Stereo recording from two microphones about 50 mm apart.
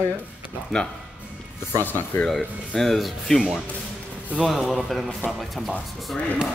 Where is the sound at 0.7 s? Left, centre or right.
Centre.